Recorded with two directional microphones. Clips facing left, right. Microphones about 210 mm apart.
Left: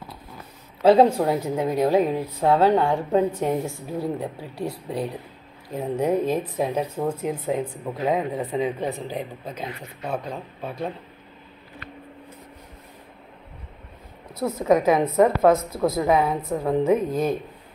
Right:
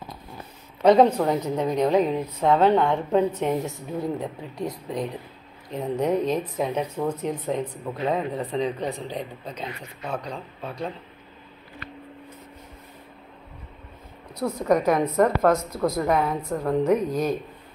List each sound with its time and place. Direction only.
1.0 s a woman's voice: 10° left (ahead or behind)
7.6 s speech: 25° left (ahead or behind)
8.3 s speech: centre (ahead or behind)
14.3 s speech: 5° left (ahead or behind)